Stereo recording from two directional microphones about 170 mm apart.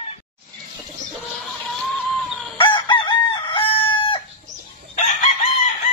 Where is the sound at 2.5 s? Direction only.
30° left (ahead or behind).